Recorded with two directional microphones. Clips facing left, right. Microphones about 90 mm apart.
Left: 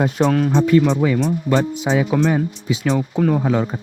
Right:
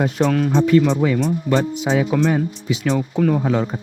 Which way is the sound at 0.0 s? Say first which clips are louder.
Left 1 dB; 35° left (ahead or behind).